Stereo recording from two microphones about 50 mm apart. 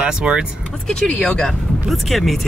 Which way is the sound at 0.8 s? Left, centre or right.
Centre.